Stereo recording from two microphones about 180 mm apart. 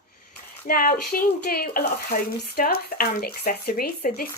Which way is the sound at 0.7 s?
55° left (ahead or behind).